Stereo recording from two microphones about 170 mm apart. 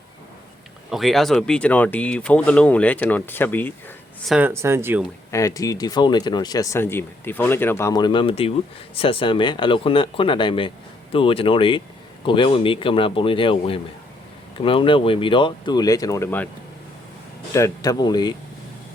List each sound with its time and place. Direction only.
0.9 s speech: centre (ahead or behind)
4.3 s speech: 10° right (ahead or behind)
5.3 s speech: 20° left (ahead or behind)
17.5 s speech: 20° left (ahead or behind)